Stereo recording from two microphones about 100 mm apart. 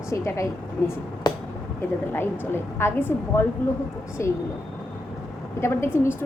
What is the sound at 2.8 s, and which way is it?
A woman's voice, 20° left (ahead or behind).